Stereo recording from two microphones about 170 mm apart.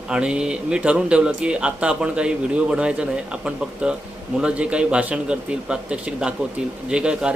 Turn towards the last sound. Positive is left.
turn(degrees=-5)  # may be behind; listen again after turning